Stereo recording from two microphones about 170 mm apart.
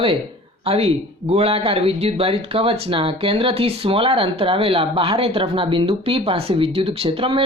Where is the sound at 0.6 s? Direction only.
35° right (ahead or behind).